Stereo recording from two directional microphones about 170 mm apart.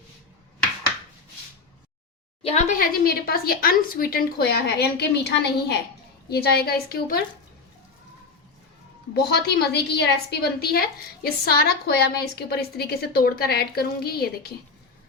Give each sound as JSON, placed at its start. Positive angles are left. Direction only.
{"t": 2.4, "sound": "speech", "side_deg": 40}
{"t": 6.2, "sound": "a woman's voice", "side_deg": 70}
{"t": 9.1, "sound": "a woman's voice", "side_deg": 75}